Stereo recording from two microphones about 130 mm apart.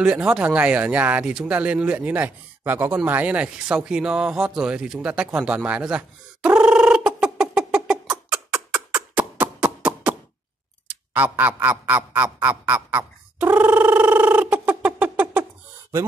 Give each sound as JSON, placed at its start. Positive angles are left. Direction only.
{"t": 0.0, "sound": "speech", "side_deg": -5}
{"t": 3.1, "sound": "a sound", "side_deg": -10}
{"t": 10.9, "sound": "speech", "side_deg": -10}